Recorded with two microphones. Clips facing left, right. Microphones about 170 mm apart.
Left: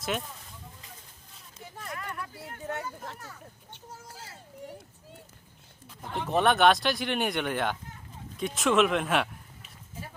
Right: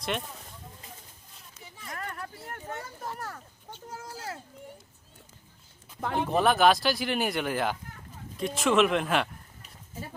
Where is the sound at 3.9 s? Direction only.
90° right.